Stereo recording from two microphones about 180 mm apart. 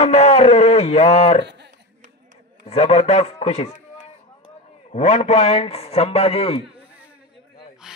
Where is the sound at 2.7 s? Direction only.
35° left (ahead or behind).